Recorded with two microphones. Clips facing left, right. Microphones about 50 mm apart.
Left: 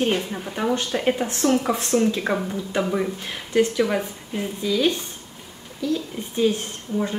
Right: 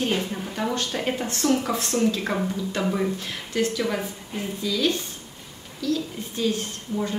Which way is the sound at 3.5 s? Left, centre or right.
Centre.